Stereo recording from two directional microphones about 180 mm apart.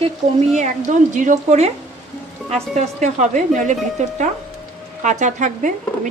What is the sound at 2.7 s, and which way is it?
Speech, 40° right (ahead or behind).